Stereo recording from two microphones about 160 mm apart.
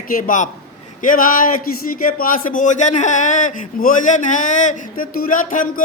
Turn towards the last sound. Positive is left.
turn(degrees=55)  # may be behind; listen again after turning